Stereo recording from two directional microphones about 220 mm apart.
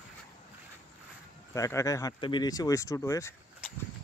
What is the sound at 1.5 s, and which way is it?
Speech, 15° left (ahead or behind).